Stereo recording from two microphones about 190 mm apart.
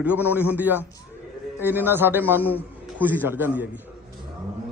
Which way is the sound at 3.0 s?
10° right (ahead or behind).